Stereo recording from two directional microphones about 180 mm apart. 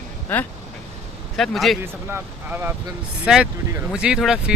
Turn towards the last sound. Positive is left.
turn(degrees=-5)  # may be behind; listen again after turning